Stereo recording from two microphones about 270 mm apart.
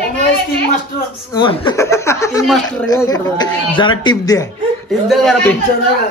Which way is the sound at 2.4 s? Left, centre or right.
Centre.